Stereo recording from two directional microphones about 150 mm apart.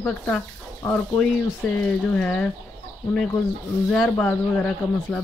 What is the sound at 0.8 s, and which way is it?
Speech, 15° left (ahead or behind).